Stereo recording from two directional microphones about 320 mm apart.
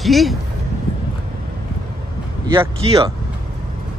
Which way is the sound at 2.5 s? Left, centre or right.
Centre.